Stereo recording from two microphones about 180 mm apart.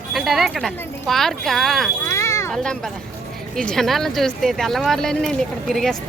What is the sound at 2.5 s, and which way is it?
A woman's voice, 5° left (ahead or behind).